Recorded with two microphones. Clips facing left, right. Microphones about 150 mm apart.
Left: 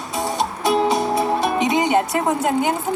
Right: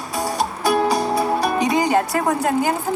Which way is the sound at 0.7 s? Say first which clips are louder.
Even; 25° left (ahead or behind).